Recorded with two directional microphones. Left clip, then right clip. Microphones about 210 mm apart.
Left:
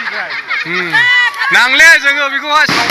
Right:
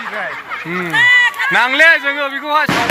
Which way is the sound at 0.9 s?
30° left (ahead or behind).